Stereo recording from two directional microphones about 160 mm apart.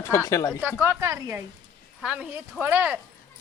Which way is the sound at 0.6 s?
10° right (ahead or behind).